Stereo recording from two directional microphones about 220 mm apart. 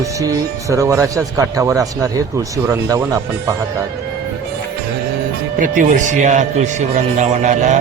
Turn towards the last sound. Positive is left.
turn(degrees=-35)  # may be behind; listen again after turning